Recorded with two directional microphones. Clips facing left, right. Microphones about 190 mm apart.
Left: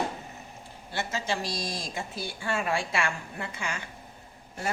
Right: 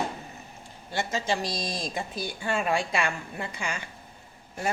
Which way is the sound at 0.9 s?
15° right (ahead or behind).